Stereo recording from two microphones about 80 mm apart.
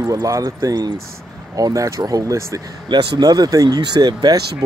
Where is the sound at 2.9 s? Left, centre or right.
Right.